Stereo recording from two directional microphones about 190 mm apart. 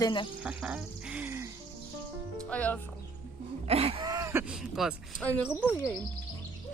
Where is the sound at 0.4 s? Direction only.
5° right (ahead or behind).